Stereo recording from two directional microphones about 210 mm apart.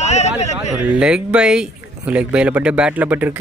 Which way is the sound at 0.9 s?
5° right (ahead or behind).